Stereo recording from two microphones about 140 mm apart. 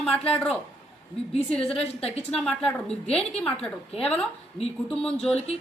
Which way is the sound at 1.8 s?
45° left (ahead or behind).